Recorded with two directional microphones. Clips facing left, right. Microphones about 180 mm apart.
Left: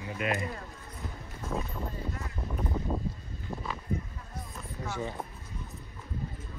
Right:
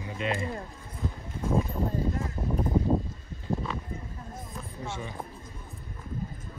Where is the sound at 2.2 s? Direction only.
25° right (ahead or behind).